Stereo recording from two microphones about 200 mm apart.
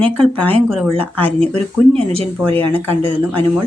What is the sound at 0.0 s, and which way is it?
Speech, 5° left (ahead or behind).